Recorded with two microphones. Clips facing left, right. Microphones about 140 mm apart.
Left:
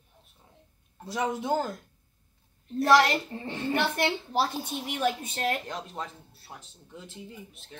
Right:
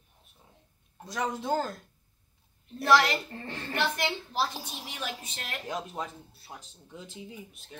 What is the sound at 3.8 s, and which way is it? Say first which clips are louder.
Speech: left 1 dB; 50° left (ahead or behind).